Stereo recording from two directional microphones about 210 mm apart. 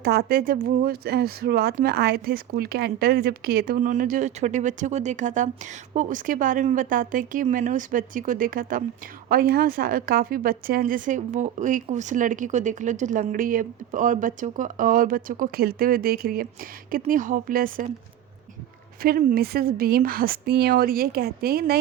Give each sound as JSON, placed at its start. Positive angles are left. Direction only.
{"t": 0.0, "sound": "speech", "side_deg": -50}
{"t": 19.0, "sound": "speech", "side_deg": -45}